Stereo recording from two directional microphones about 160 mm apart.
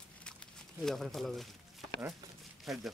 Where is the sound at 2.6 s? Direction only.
Centre (ahead or behind).